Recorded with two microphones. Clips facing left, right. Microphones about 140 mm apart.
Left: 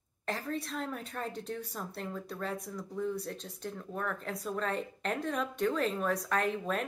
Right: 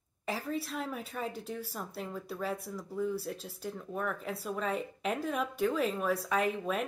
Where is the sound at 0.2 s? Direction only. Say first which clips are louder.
Right 1 dB; 5° right (ahead or behind).